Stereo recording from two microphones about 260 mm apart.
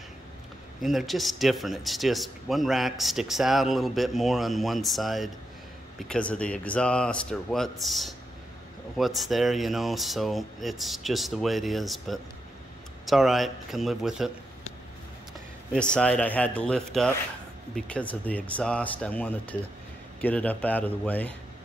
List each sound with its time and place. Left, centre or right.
0.7 s speech: centre
15.7 s speech: centre